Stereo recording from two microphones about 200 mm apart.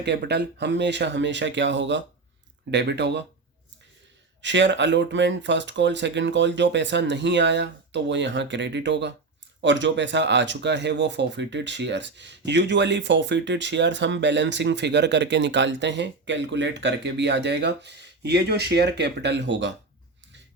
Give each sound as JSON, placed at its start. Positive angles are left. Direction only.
{"t": 0.0, "sound": "speech", "side_deg": -55}
{"t": 4.4, "sound": "speech", "side_deg": -65}